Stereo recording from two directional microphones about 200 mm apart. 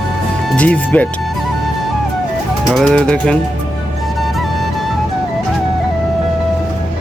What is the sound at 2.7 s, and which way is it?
Speech, centre (ahead or behind).